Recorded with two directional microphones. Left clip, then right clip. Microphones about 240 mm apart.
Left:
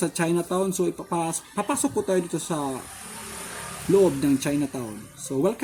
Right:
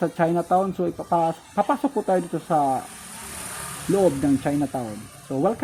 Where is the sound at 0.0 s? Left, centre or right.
Centre.